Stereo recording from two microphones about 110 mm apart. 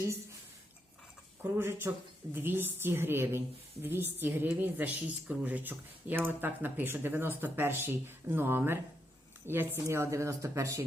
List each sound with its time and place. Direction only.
1.4 s a woman's voice: 20° right (ahead or behind)